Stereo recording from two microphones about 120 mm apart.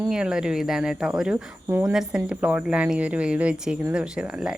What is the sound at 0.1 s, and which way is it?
Speech, 5° right (ahead or behind).